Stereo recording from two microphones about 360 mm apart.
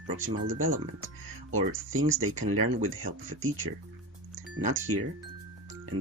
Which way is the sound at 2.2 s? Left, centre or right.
Right.